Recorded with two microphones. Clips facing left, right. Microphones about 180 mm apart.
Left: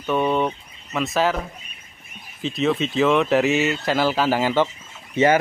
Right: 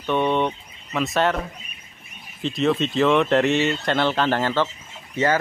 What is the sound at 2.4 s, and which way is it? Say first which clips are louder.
Speech: even; centre (ahead or behind).